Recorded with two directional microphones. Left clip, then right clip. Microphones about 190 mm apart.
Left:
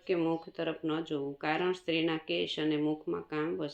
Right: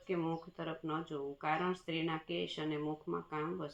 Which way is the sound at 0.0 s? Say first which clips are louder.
Left 7 dB; 35° left (ahead or behind).